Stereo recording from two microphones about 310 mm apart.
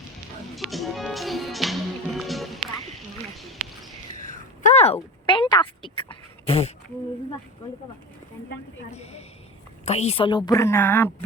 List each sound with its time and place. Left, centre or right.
0.5 s music: centre
4.2 s a sound: left
8.9 s a woman's voice: centre